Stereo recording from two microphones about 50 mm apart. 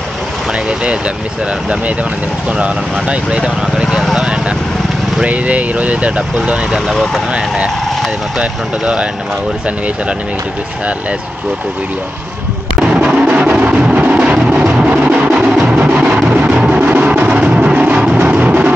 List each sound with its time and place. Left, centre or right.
0.5 s speech: right
2.5 s speech: right
6.9 s speech: centre
7.3 s speech: right
12.8 s music: right